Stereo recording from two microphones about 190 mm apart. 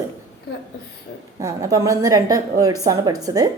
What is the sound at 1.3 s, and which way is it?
A woman's voice, 15° right (ahead or behind).